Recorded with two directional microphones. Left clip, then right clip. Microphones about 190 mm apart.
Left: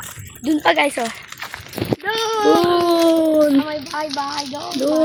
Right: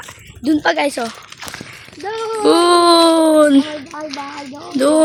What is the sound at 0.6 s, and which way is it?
A woman's voice, 20° right (ahead or behind).